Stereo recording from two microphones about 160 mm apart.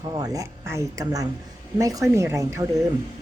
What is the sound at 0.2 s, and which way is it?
A woman's voice, 20° right (ahead or behind).